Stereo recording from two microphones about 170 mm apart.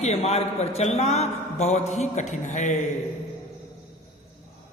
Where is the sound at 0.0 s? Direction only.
40° left (ahead or behind).